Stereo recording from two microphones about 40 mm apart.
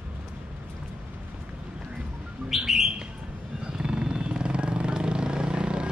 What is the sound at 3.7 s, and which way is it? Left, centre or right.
Vehicle, right.